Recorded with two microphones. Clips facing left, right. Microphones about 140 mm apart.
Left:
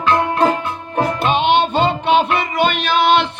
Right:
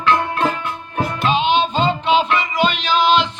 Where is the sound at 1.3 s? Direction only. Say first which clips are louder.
Left 1 dB; 60° left (ahead or behind).